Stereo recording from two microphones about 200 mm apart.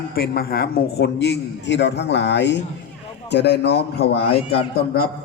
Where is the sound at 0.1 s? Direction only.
50° left (ahead or behind).